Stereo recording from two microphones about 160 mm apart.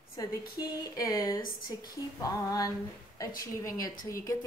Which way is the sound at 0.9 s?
20° left (ahead or behind).